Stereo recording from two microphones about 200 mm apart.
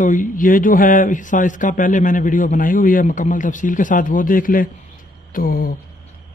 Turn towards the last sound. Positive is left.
turn(degrees=45)  # may be behind; listen again after turning